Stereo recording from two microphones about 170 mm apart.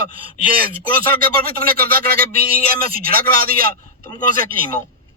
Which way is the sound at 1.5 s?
60° right (ahead or behind).